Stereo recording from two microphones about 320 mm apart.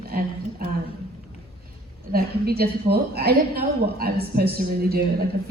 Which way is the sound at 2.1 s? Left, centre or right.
Right.